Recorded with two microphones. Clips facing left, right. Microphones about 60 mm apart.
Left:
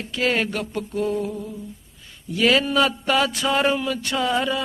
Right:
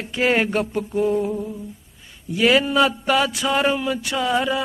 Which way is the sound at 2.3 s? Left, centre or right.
Centre.